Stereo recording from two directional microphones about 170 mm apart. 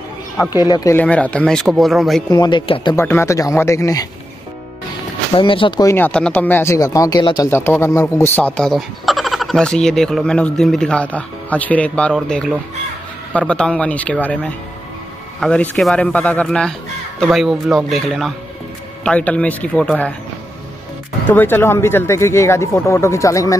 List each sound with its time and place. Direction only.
0.7 s speech: 20° left (ahead or behind)
0.9 s speech: 10° left (ahead or behind)
2.3 s speech: 25° left (ahead or behind)
3.0 s speech: 15° left (ahead or behind)
5.3 s speech: 30° left (ahead or behind)
7.5 s speech: 15° left (ahead or behind)
8.5 s speech: centre (ahead or behind)
21.3 s speech: 10° left (ahead or behind)